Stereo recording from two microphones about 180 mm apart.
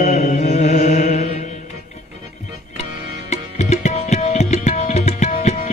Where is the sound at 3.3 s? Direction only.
40° left (ahead or behind).